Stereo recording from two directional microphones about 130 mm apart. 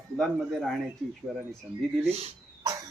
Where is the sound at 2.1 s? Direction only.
55° right (ahead or behind).